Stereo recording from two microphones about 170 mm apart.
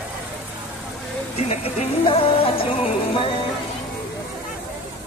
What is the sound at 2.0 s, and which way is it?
Music, 35° left (ahead or behind).